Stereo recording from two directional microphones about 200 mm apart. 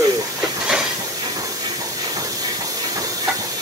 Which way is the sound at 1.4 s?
15° right (ahead or behind).